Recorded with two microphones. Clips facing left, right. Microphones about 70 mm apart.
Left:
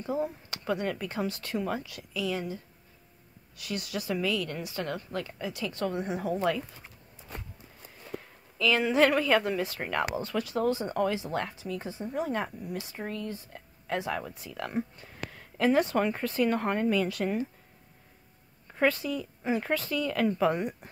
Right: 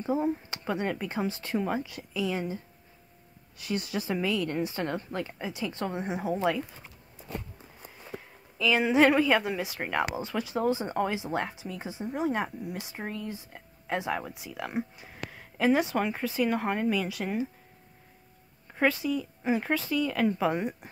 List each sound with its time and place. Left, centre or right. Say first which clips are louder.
0.0 s speech: right 3 dB; right
8.5 s speech: right 1 dB; centre
18.8 s speech: right 1 dB; centre